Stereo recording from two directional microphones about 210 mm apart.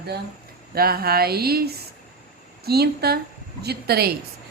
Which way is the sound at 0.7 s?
45° right (ahead or behind).